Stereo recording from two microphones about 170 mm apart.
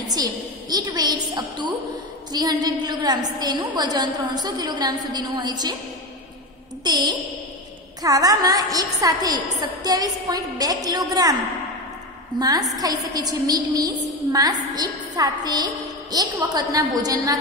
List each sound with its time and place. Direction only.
0.1 s a woman's voice: 25° right (ahead or behind)
6.8 s a sound: 25° right (ahead or behind)
8.0 s a woman's voice: 20° right (ahead or behind)
12.4 s a woman's voice: 20° right (ahead or behind)